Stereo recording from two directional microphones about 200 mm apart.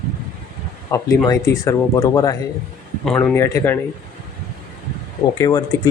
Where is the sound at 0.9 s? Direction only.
15° left (ahead or behind).